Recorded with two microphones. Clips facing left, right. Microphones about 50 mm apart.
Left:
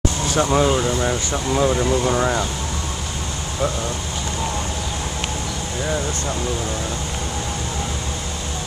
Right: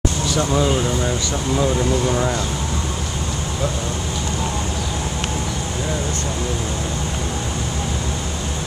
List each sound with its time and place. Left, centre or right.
0.4 s speech: left